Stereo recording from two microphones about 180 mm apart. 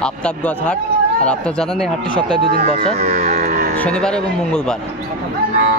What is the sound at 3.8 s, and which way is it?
Speech, 5° left (ahead or behind).